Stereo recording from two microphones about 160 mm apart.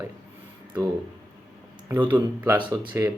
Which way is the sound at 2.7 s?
15° right (ahead or behind).